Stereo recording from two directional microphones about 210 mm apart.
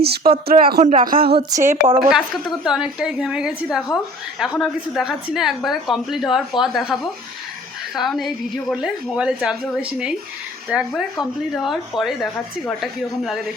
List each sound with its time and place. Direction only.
0.0 s speech: 45° right (ahead or behind)
1.5 s speech: 15° right (ahead or behind)
2.0 s a woman's voice: 5° right (ahead or behind)